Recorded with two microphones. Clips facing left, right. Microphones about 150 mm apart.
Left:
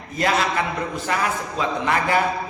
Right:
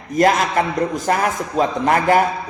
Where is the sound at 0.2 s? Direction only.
45° right (ahead or behind).